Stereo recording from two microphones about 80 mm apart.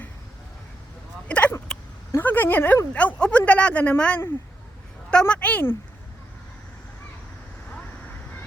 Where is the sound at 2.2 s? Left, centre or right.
Left.